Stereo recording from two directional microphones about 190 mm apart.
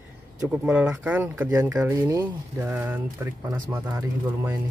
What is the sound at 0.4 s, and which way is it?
Speech, 5° right (ahead or behind).